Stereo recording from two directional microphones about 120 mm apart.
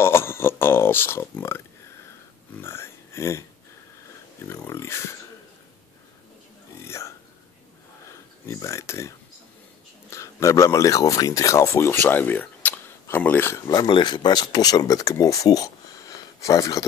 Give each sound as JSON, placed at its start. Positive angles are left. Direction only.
{"t": 0.0, "sound": "a sound", "side_deg": 20}
{"t": 2.6, "sound": "speech", "side_deg": 20}
{"t": 4.5, "sound": "speech", "side_deg": 20}
{"t": 6.8, "sound": "hiccup", "side_deg": 25}
{"t": 8.1, "sound": "speech", "side_deg": 25}
{"t": 13.7, "sound": "speech", "side_deg": 40}